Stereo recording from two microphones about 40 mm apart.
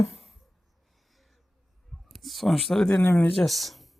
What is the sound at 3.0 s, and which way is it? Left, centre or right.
Speech, left.